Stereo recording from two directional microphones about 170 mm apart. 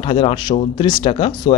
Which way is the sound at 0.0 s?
30° left (ahead or behind).